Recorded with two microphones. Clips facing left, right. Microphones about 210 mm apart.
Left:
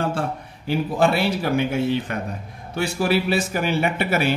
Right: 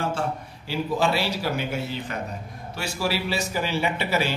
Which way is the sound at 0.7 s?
55° left (ahead or behind).